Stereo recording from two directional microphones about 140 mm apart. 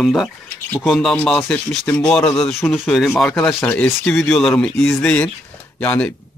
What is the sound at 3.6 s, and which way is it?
Speech, 10° left (ahead or behind).